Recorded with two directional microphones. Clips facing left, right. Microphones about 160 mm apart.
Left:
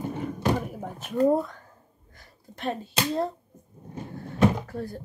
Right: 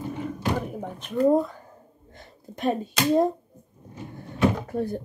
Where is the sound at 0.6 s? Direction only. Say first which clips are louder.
Right 2 dB; 5° left (ahead or behind).